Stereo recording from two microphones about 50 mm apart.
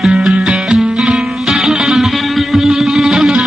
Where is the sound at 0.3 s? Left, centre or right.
Centre.